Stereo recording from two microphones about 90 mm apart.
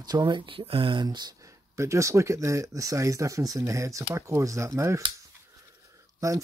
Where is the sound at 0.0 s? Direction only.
50° right (ahead or behind); by 1.0 s 80° right.